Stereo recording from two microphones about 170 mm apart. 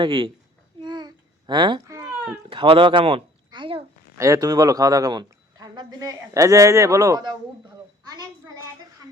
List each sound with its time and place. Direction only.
0.0 s speech: 30° right (ahead or behind)
0.8 s babbling: 25° right (ahead or behind)
2.5 s speech: 30° right (ahead or behind)
4.2 s speech: 20° right (ahead or behind)